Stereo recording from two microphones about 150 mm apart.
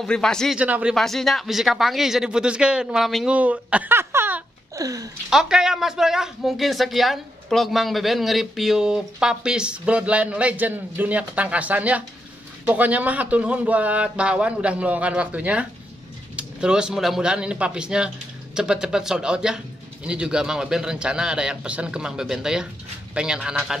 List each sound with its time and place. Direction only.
0.0 s speech: 5° left (ahead or behind)
0.6 s a man's voice: 10° right (ahead or behind)
0.9 s speech: centre (ahead or behind); by 5.1 s 25° right (ahead or behind)
5.3 s a man's voice: 5° right (ahead or behind)